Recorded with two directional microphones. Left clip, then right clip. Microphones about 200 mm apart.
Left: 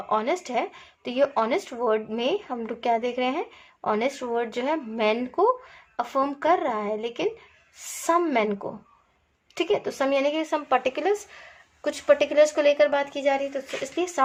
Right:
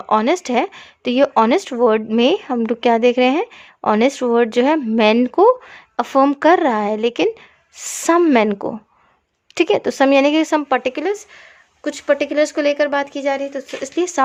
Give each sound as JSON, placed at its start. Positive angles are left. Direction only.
{"t": 0.1, "sound": "speech", "side_deg": -55}